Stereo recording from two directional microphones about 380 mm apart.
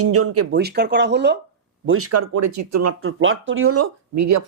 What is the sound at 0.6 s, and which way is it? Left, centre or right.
Speech, right.